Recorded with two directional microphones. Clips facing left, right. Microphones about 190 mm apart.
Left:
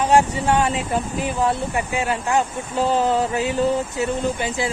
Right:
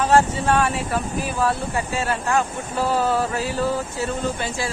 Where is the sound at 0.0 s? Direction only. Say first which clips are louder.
Left 1 dB; 15° left (ahead or behind).